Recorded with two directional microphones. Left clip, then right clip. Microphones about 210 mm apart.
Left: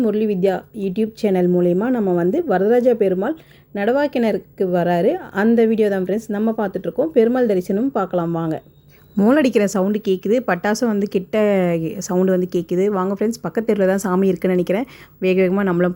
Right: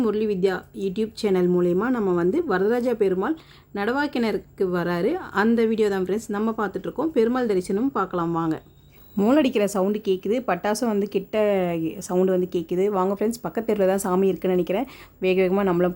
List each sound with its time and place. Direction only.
0.0 s a woman's voice: 5° left (ahead or behind)